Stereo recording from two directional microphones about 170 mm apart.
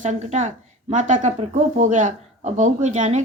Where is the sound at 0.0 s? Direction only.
45° right (ahead or behind).